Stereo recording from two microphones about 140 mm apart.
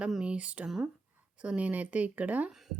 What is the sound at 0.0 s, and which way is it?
Speech, 5° right (ahead or behind).